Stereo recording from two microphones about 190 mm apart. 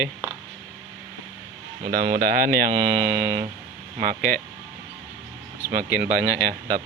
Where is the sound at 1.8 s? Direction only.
45° right (ahead or behind).